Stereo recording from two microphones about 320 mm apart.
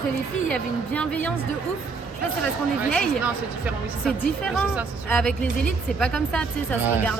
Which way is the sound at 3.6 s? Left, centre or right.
Centre.